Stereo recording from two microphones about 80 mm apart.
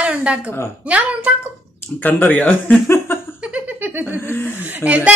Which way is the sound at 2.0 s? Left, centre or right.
Left.